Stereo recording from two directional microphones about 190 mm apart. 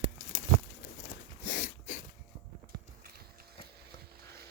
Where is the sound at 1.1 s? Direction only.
45° left (ahead or behind).